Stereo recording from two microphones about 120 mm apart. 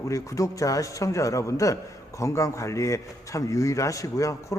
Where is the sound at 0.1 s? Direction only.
25° left (ahead or behind).